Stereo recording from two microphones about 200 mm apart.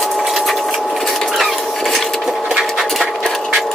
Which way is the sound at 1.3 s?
Centre (ahead or behind).